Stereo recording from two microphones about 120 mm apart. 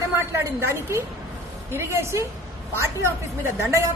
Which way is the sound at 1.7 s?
20° right (ahead or behind).